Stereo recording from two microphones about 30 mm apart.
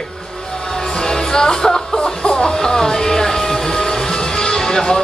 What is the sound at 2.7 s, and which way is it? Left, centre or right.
Music, centre.